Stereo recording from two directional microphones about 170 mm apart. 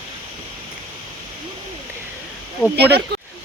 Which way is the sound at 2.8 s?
75° right (ahead or behind).